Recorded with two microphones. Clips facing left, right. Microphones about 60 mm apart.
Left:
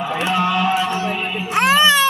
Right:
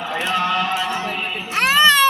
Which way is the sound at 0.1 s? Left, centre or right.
Centre.